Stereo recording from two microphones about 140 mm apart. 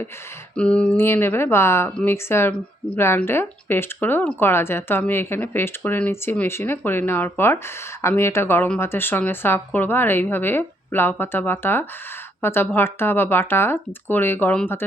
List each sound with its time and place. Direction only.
0.5 s speech: 10° left (ahead or behind)